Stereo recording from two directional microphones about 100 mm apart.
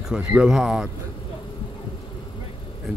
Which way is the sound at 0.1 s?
10° right (ahead or behind).